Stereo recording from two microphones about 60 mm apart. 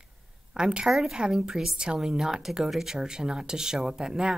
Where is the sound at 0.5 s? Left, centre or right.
Centre.